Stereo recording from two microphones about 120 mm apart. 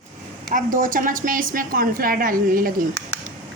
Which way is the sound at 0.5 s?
90° right.